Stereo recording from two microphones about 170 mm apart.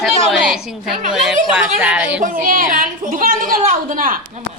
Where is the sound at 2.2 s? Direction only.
50° right (ahead or behind).